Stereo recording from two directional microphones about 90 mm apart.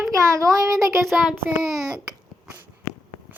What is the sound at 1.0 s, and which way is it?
Child singing, centre (ahead or behind).